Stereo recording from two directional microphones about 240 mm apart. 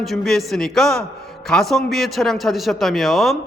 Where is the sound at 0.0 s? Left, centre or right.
Centre.